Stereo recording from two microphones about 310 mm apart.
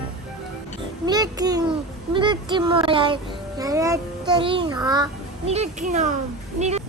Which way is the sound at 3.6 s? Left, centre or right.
Centre.